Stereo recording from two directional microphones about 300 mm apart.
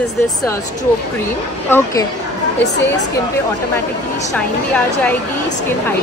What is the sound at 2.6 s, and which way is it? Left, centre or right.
Speech, left.